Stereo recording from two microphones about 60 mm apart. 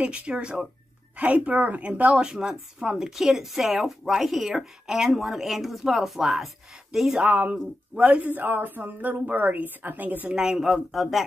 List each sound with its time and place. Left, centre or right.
0.0 s a woman's voice: centre
7.2 s a woman's voice: right
10.3 s speech: centre